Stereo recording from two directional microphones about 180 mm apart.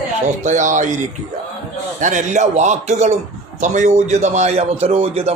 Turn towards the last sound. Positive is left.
turn(degrees=-35)  # may be behind; listen again after turning